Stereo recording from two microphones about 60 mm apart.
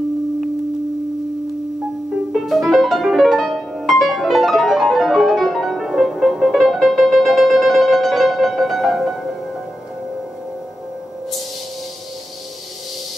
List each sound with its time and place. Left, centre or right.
2.3 s music: centre